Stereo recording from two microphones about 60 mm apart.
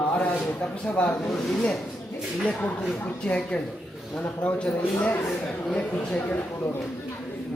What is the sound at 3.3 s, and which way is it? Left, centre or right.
Speech, left.